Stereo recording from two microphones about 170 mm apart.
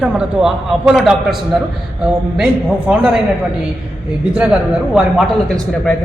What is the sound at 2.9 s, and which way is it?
Speech, 10° right (ahead or behind).